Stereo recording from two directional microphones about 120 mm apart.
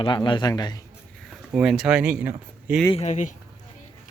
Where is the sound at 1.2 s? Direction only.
5° right (ahead or behind).